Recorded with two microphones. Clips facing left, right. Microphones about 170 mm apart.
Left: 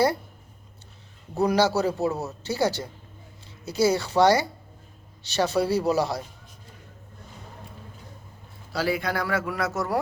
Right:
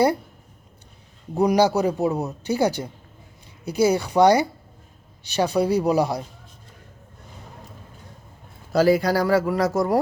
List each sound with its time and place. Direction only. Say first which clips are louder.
1.4 s a man's voice: right 3 dB; 15° right (ahead or behind)
8.7 s a man's voice: right 8 dB; 40° right (ahead or behind)